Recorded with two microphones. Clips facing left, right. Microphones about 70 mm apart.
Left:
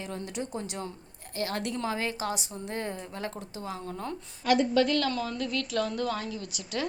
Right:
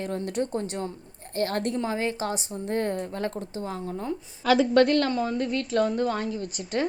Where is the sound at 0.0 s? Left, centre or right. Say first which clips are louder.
Right 7 dB; right.